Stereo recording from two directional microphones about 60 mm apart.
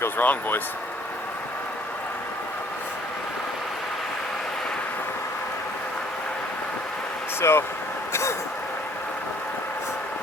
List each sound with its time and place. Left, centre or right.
0.2 s speech: left
7.4 s speech: left
8.1 s vehicle: left